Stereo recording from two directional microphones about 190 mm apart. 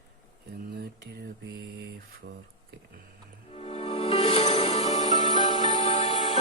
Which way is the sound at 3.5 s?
35° left (ahead or behind).